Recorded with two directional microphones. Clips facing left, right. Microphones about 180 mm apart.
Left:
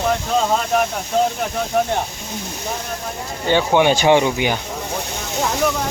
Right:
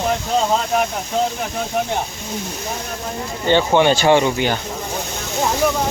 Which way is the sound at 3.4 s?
10° left (ahead or behind).